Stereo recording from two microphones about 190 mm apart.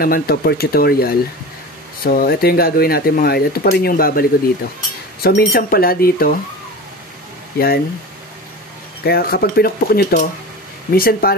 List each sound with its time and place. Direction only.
0.0 s speech: 50° left (ahead or behind)
7.5 s speech: 55° left (ahead or behind)
9.0 s speech: 55° left (ahead or behind)